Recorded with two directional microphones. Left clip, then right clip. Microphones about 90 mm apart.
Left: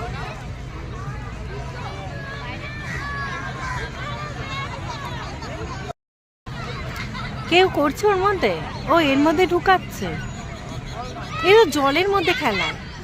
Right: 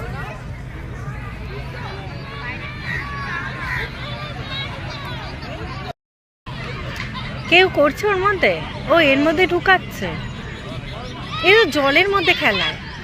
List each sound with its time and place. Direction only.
7.2 s a sound: 35° left (ahead or behind)
7.8 s speech: 45° left (ahead or behind)
8.3 s speech: 40° left (ahead or behind)
11.3 s speech: 40° left (ahead or behind)